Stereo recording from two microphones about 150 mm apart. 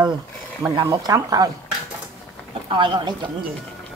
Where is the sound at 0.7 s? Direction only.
25° right (ahead or behind).